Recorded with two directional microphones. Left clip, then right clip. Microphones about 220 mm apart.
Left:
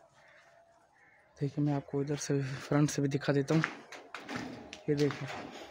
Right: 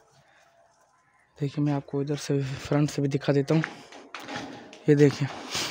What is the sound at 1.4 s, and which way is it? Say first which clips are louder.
Speech: right 5 dB; 15° right (ahead or behind).